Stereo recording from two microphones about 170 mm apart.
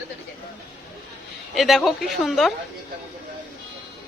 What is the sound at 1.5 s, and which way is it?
Speech, centre (ahead or behind).